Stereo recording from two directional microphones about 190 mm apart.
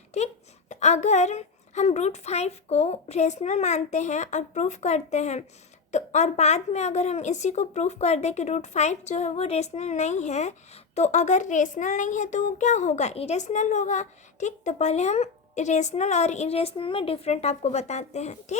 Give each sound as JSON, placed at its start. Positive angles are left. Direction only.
{"t": 0.1, "sound": "a woman's voice", "side_deg": 35}